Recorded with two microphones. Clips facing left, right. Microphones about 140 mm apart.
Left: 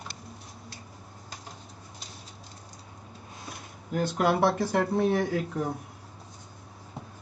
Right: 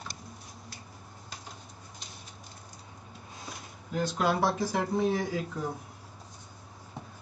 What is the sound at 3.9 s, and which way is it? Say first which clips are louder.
Speech: left 3 dB; 55° left (ahead or behind).